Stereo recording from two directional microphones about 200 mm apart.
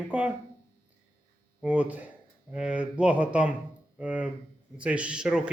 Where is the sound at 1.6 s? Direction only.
5° right (ahead or behind).